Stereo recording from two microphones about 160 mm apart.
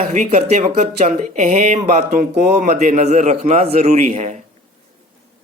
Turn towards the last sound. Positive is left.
turn(degrees=-45)  # may be behind; listen again after turning